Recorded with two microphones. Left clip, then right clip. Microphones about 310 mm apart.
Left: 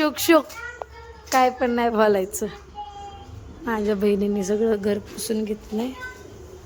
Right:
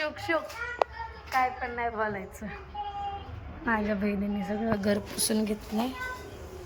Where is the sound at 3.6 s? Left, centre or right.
Centre.